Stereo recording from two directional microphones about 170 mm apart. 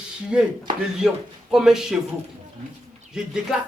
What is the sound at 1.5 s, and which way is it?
Speech, 5° right (ahead or behind).